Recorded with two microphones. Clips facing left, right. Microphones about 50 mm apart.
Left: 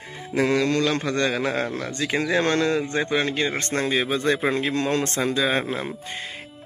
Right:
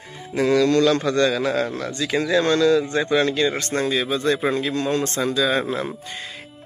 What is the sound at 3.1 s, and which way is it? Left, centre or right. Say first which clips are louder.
Speech: right 4 dB; left.